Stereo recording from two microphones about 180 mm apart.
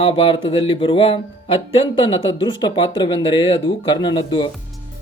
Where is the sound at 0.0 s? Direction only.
30° left (ahead or behind).